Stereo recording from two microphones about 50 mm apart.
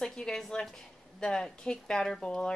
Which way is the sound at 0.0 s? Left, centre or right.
Centre.